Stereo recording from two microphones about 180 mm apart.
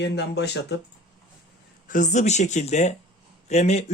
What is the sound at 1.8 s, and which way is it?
Speech, 45° left (ahead or behind).